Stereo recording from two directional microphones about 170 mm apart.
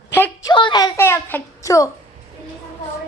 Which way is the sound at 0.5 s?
25° left (ahead or behind).